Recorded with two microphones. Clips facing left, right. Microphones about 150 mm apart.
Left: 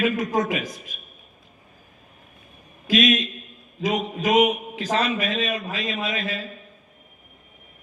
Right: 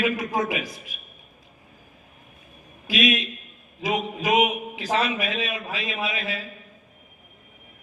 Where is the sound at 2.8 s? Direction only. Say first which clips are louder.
Left 3 dB; 45° left (ahead or behind).